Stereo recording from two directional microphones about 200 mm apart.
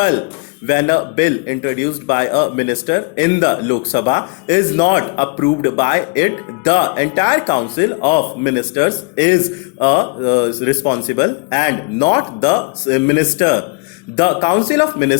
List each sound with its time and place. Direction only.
0.7 s a man's voice: 25° left (ahead or behind)